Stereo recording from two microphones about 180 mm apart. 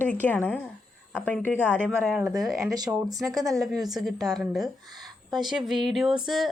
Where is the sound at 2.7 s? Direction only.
20° right (ahead or behind).